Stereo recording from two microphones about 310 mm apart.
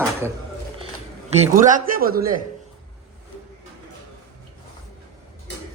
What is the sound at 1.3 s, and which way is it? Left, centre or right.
A man's voice, right.